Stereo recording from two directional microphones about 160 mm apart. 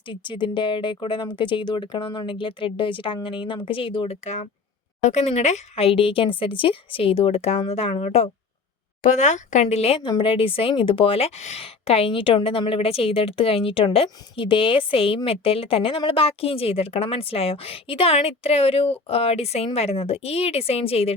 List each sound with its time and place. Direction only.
0.1 s a woman's voice: 30° left (ahead or behind)
4.2 s a woman's voice: 45° left (ahead or behind)